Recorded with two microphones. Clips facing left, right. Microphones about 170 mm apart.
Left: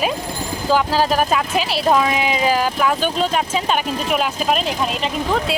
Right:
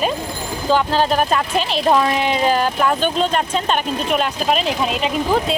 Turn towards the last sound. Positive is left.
turn(degrees=-5)  # may be behind; listen again after turning